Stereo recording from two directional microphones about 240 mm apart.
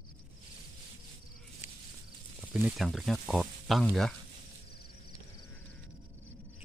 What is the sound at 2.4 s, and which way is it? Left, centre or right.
Speech, centre.